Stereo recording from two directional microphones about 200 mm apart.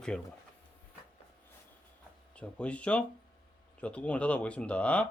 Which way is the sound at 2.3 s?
5° left (ahead or behind).